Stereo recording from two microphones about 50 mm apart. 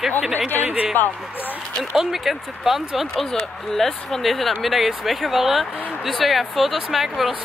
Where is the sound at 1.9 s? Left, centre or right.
Centre.